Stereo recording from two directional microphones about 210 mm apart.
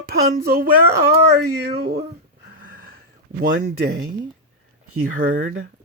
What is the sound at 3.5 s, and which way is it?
Speech, 40° right (ahead or behind).